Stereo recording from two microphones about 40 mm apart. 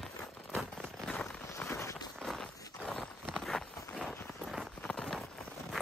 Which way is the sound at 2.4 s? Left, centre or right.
Centre.